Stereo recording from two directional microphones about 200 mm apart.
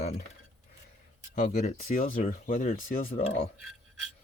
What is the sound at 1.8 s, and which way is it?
Speech, 45° left (ahead or behind).